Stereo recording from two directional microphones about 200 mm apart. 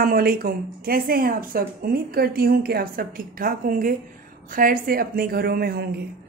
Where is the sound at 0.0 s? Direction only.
45° right (ahead or behind).